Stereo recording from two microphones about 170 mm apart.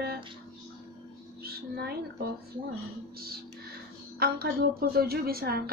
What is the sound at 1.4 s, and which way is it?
Music, 65° right (ahead or behind).